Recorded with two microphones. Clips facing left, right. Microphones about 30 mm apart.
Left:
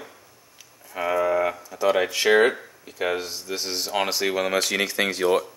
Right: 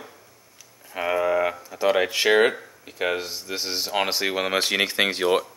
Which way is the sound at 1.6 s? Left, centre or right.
Centre.